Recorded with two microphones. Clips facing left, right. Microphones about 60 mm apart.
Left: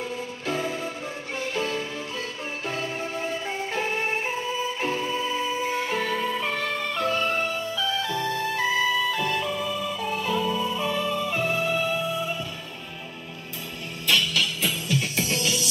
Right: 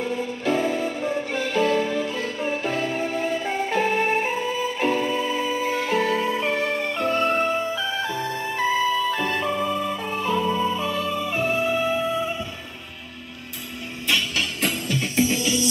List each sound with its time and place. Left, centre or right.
0.5 s music: right
6.5 s music: right
10.7 s music: centre
11.1 s music: centre
15.1 s music: right